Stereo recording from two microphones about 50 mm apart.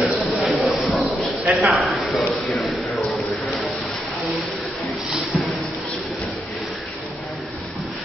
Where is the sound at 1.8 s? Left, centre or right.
Centre.